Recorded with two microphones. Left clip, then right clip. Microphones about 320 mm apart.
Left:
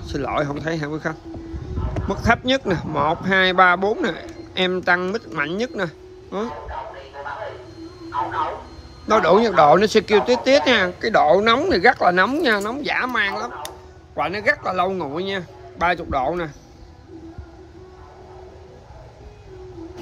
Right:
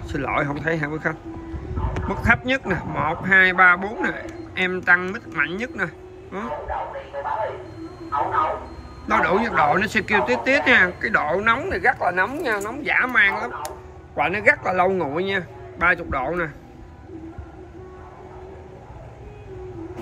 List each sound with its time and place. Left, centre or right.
0.1 s speech: centre
9.0 s speech: centre